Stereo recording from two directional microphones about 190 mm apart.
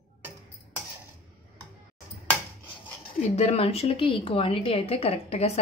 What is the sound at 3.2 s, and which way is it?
A woman's voice, 35° left (ahead or behind).